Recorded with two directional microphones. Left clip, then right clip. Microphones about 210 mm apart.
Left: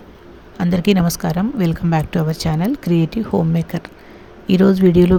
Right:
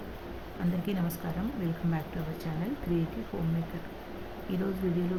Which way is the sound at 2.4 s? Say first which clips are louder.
Left 16 dB; 55° left (ahead or behind).